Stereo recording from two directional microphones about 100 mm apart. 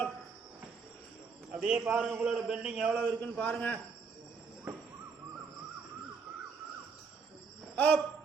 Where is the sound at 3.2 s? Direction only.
15° left (ahead or behind).